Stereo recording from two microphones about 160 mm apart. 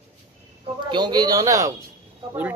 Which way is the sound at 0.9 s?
25° right (ahead or behind).